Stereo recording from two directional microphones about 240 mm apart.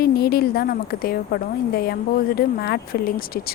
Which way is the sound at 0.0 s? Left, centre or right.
Left.